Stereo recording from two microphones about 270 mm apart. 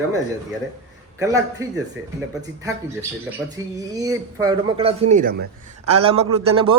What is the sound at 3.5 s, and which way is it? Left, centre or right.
A man's voice, centre.